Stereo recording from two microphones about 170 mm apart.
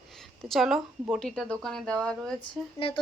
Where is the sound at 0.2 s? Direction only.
Centre (ahead or behind).